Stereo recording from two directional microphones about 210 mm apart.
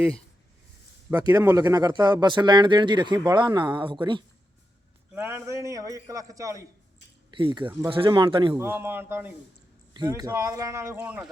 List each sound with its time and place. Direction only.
1.3 s speech: 10° right (ahead or behind)
5.1 s a man's voice: 10° right (ahead or behind)
8.5 s a man's voice: 10° right (ahead or behind)